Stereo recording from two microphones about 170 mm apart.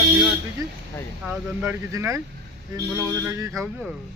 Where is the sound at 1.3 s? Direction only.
10° right (ahead or behind).